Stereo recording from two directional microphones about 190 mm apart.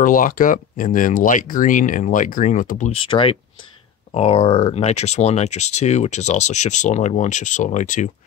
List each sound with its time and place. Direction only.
0.0 s speech: 45° left (ahead or behind)
2.9 s speech: 30° left (ahead or behind)